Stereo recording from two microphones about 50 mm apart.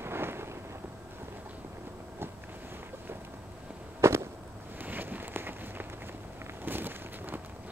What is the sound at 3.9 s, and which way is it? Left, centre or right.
Fireworks, right.